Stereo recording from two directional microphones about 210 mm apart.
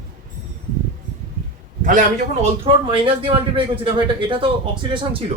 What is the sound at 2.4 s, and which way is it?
A man's voice, 25° right (ahead or behind).